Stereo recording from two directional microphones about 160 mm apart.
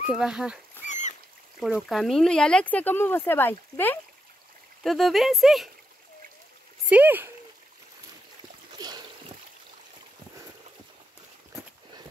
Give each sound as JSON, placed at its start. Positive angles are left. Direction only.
{"t": 0.1, "sound": "speech", "side_deg": -5}
{"t": 0.8, "sound": "rodents", "side_deg": 50}
{"t": 1.6, "sound": "speech", "side_deg": 0}
{"t": 4.8, "sound": "speech", "side_deg": 0}
{"t": 6.9, "sound": "speech", "side_deg": -10}
{"t": 8.7, "sound": "a sound", "side_deg": -25}